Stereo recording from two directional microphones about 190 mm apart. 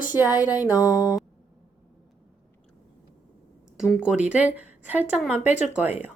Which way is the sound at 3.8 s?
5° right (ahead or behind).